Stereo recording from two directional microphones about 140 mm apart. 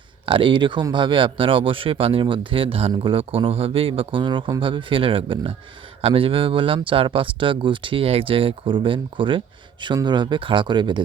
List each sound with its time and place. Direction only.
0.3 s speech: 35° right (ahead or behind)